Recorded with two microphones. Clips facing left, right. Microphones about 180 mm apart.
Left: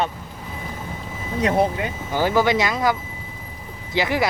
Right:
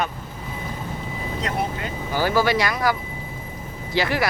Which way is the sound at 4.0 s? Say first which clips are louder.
Left 1 dB; 20° left (ahead or behind).